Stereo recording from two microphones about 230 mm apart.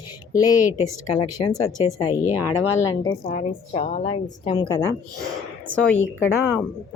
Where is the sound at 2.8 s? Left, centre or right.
Centre.